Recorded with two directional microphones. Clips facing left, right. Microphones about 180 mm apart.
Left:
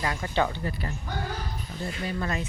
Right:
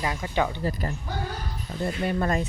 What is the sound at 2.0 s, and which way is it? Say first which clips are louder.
Speech: right 5 dB; 45° right (ahead or behind).